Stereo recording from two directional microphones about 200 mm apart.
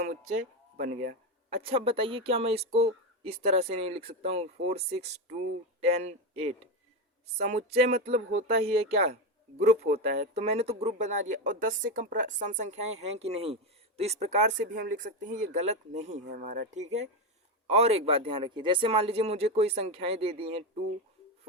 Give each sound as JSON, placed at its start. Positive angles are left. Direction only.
{"t": 0.8, "sound": "speech", "side_deg": -35}
{"t": 7.9, "sound": "speech", "side_deg": -30}